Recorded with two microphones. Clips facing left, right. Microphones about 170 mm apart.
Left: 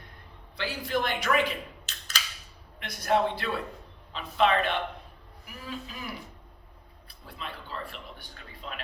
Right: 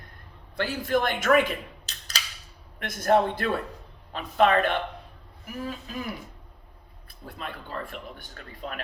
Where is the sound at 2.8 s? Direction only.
50° right (ahead or behind).